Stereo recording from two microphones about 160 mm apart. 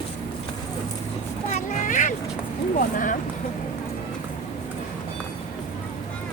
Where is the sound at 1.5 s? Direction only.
50° left (ahead or behind).